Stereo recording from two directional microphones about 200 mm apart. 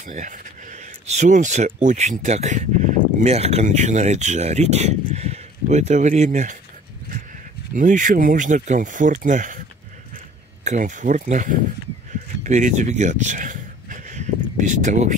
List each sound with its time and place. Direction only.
0.0 s speech: 40° right (ahead or behind)
7.7 s speech: 40° right (ahead or behind)
10.6 s speech: 35° right (ahead or behind)
12.4 s a sound: 35° right (ahead or behind)
14.7 s speech: 35° right (ahead or behind)